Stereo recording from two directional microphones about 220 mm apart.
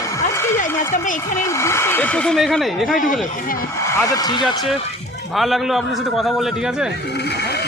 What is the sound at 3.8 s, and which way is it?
Speech, 15° left (ahead or behind).